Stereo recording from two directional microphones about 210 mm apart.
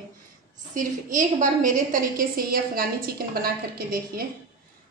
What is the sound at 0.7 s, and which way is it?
A woman's voice, 40° right (ahead or behind).